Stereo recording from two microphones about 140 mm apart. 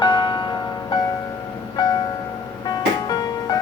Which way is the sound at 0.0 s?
35° left (ahead or behind).